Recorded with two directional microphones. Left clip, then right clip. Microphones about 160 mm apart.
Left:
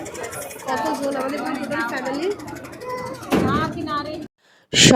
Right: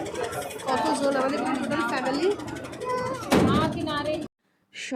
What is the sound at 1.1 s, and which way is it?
Speech, 10° right (ahead or behind).